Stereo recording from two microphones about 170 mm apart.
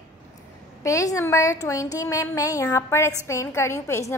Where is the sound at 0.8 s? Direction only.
20° left (ahead or behind).